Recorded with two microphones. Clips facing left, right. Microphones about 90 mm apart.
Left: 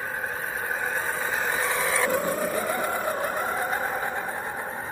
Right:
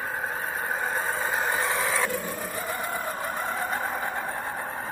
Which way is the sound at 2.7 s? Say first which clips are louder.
Left 4 dB; 20° left (ahead or behind).